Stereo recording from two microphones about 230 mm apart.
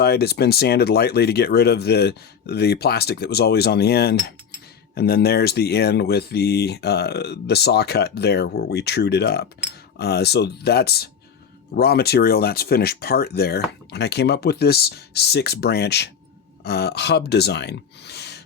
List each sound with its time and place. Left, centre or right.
0.0 s speech: left